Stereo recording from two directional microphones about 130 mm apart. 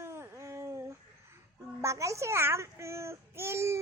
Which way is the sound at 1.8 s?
25° right (ahead or behind).